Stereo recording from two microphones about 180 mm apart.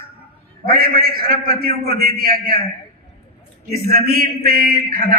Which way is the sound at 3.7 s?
60° right (ahead or behind).